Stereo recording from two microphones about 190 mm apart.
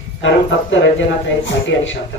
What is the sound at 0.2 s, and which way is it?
Speech, 80° left.